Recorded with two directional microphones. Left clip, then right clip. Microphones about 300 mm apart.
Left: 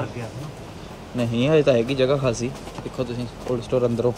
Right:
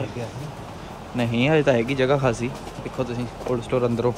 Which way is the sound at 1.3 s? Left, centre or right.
Centre.